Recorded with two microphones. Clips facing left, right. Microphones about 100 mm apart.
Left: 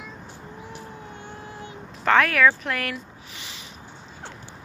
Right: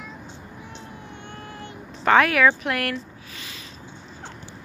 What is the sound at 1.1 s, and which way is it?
Vehicle, 5° left (ahead or behind).